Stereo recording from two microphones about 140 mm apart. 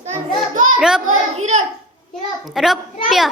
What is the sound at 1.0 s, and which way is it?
Speech, 60° right (ahead or behind).